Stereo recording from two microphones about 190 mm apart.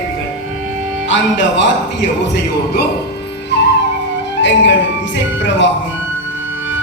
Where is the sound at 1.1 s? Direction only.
70° left (ahead or behind).